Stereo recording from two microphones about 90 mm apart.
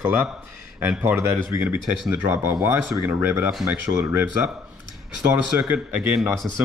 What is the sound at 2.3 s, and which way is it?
Speech, 30° right (ahead or behind).